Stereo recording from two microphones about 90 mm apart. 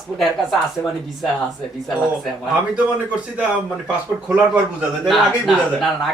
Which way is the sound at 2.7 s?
15° right (ahead or behind).